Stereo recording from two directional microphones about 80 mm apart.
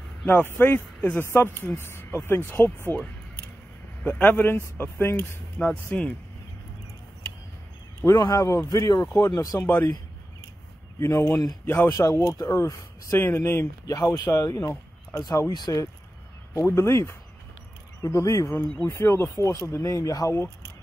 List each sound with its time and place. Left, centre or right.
0.3 s speech: left
4.0 s speech: left
5.7 s speech: centre
8.2 s speech: left
9.3 s speech: left
11.0 s speech: left
13.9 s speech: left
15.5 s speech: left
16.5 s speech: left
18.9 s speech: left